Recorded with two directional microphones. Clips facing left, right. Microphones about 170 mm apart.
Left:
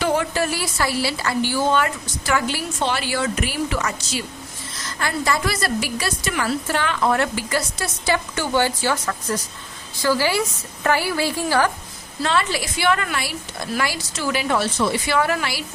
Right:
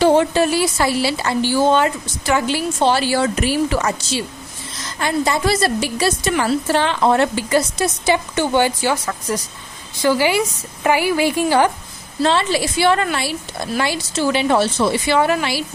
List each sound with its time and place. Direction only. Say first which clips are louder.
0.0 s a woman's voice: right 7 dB; 30° right (ahead or behind)
4.9 s a woman's voice: right 4 dB; 20° right (ahead or behind)